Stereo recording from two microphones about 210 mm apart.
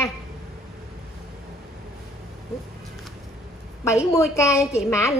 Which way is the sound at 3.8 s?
15° left (ahead or behind).